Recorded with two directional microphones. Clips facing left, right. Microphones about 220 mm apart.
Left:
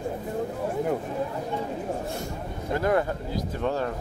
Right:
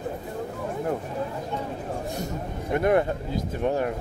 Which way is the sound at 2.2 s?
20° right (ahead or behind).